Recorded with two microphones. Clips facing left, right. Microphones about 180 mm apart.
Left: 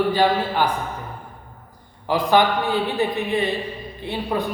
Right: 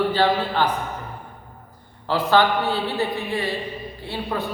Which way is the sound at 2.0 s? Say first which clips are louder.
Left 1 dB; 15° left (ahead or behind).